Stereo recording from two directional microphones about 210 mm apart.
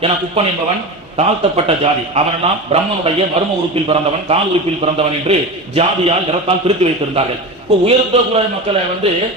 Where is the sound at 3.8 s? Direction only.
30° right (ahead or behind).